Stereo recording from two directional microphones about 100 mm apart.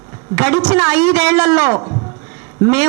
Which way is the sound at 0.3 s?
20° right (ahead or behind).